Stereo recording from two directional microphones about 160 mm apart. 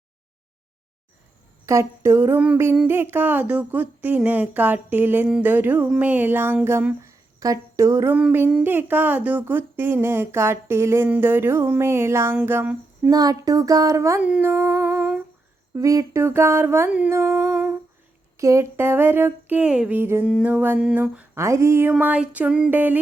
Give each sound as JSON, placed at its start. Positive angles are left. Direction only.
{"t": 1.6, "sound": "speech", "side_deg": -15}
{"t": 14.3, "sound": "humming", "side_deg": -10}
{"t": 15.7, "sound": "speech", "side_deg": -20}